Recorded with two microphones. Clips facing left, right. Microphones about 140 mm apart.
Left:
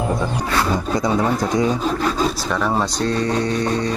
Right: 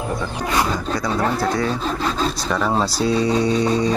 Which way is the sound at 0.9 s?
20° left (ahead or behind).